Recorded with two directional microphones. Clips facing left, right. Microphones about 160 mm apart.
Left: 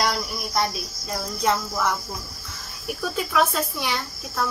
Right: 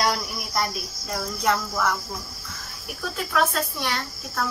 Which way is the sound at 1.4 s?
Centre (ahead or behind).